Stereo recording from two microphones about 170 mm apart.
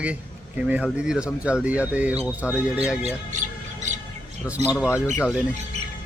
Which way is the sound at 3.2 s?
45° right (ahead or behind).